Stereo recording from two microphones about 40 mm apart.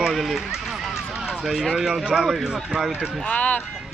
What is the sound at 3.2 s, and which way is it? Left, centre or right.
Speech, left.